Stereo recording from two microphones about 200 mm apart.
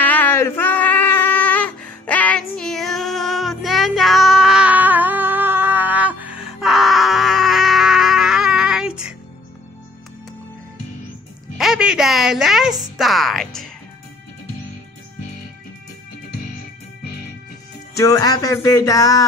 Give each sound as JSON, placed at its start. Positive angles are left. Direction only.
{"t": 0.0, "sound": "a sound", "side_deg": 10}
{"t": 11.5, "sound": "music", "side_deg": 0}
{"t": 17.9, "sound": "music", "side_deg": 15}